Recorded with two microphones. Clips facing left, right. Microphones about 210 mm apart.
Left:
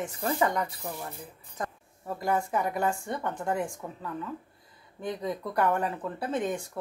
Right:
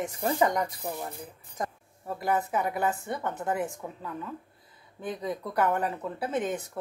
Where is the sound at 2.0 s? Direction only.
Centre (ahead or behind).